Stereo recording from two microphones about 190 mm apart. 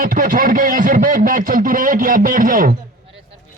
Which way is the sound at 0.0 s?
45° right (ahead or behind).